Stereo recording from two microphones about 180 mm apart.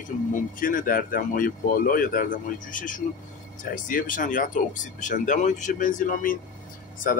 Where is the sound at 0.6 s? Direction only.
50° left (ahead or behind).